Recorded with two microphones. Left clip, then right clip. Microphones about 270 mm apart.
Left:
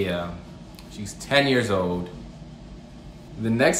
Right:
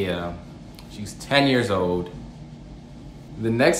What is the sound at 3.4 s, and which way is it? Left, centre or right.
Speech, centre.